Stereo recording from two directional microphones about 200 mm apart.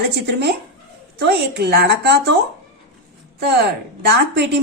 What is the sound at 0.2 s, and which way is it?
A woman's voice, 60° right (ahead or behind).